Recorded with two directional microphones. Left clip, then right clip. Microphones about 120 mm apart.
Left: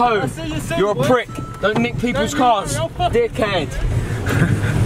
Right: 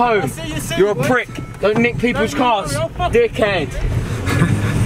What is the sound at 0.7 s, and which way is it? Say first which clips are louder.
Speech: right 1 dB; 5° right (ahead or behind).